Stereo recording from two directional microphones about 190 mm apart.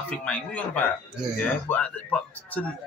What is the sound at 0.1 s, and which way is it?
A man's voice, 10° left (ahead or behind).